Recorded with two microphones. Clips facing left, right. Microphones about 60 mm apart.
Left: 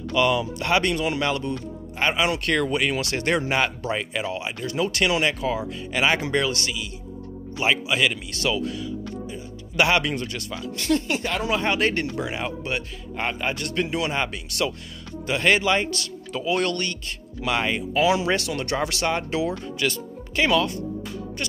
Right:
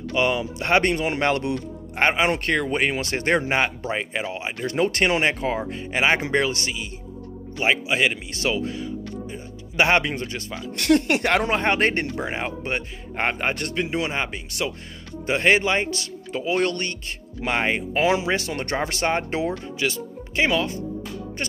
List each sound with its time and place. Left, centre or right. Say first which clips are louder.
0.1 s a man's voice: left 1 dB; right
1.4 s speech: right 2 dB; right
2.0 s a man's voice: right 1 dB; right
4.6 s a man's voice: right 2 dB; right
10.8 s speech: right 5 dB; right
13.7 s a man's voice: even; right
19.8 s speech: even; right